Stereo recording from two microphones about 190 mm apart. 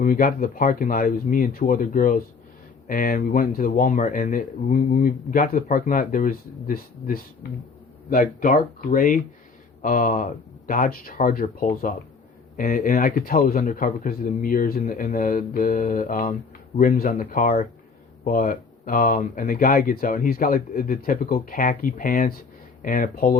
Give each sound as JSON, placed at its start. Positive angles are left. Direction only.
{"t": 0.0, "sound": "speech", "side_deg": 45}